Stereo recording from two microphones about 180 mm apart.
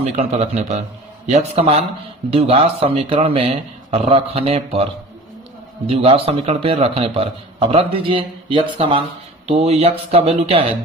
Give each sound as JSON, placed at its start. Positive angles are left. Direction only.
{"t": 0.0, "sound": "speech", "side_deg": -35}
{"t": 5.9, "sound": "speech", "side_deg": -35}